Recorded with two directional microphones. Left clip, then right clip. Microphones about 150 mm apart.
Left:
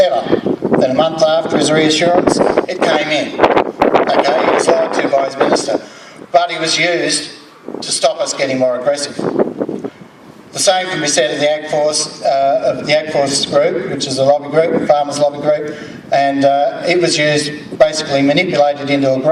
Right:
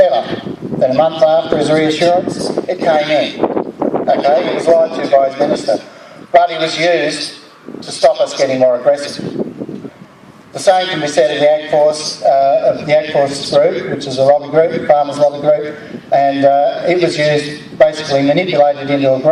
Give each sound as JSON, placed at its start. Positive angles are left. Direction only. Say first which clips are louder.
{"t": 0.7, "sound": "speech", "louder": "right 2 dB", "side_deg": 35}
{"t": 3.4, "sound": "a sound", "louder": "left 5 dB", "side_deg": 20}
{"t": 4.0, "sound": "speech", "louder": "even", "side_deg": 35}
{"t": 10.6, "sound": "speech", "louder": "right 2 dB", "side_deg": 35}